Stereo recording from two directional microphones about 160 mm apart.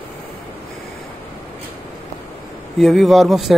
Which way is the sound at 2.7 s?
Centre (ahead or behind).